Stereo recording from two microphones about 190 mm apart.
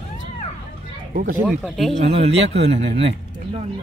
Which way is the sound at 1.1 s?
45° right (ahead or behind).